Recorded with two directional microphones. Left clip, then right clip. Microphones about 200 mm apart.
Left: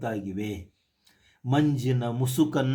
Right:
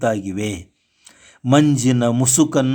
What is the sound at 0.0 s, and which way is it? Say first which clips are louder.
Speech: right 11 dB; 40° right (ahead or behind).